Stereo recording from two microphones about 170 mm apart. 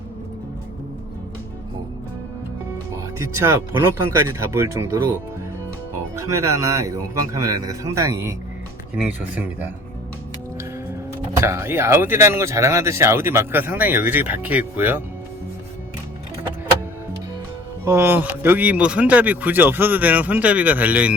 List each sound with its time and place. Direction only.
3.2 s speech: 15° right (ahead or behind)
6.1 s speech: 15° right (ahead or behind)
9.0 s speech: 10° right (ahead or behind)
11.3 s speech: 15° right (ahead or behind)
17.8 s speech: 15° right (ahead or behind)